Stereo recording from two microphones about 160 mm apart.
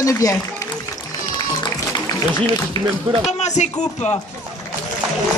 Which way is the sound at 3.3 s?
45° left (ahead or behind).